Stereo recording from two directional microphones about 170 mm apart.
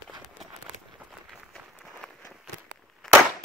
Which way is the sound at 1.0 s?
Centre (ahead or behind).